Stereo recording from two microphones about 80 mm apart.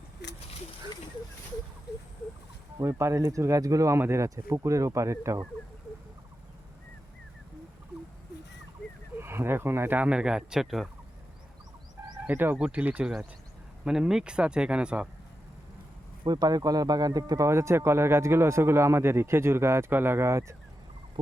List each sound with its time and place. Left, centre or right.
2.8 s speech: right
9.1 s speech: right
10.1 s speech: centre
12.2 s speech: right
13.8 s speech: centre
16.2 s speech: right